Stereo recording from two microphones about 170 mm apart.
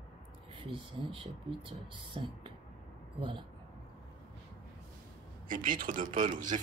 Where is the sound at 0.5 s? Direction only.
30° right (ahead or behind).